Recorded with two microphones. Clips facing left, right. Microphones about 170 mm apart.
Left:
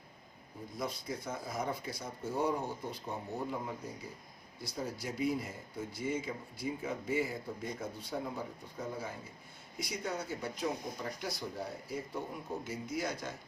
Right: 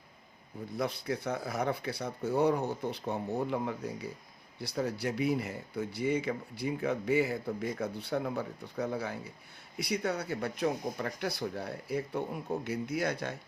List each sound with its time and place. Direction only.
0.8 s speech: 65° right (ahead or behind)